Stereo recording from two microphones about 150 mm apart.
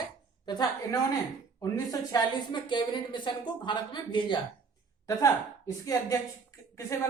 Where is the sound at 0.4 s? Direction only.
25° left (ahead or behind).